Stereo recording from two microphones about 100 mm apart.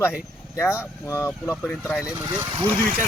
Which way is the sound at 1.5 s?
10° left (ahead or behind).